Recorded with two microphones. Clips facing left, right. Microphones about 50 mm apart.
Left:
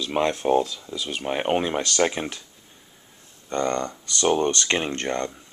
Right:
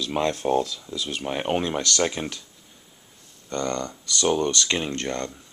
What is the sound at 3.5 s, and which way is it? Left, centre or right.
Speech, centre.